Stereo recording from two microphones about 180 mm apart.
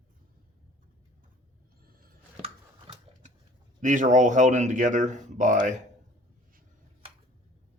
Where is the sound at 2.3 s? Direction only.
35° right (ahead or behind).